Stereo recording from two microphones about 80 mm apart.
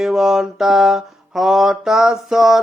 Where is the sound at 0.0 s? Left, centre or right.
Centre.